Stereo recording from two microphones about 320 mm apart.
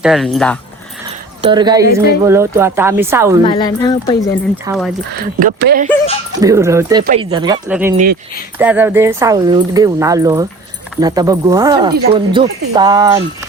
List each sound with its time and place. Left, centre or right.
0.0 s speech: centre
1.4 s speech: centre
3.4 s speech: centre
4.6 s speech: centre
5.1 s speech: right
6.4 s speech: centre
7.9 s speech: right
8.5 s speech: centre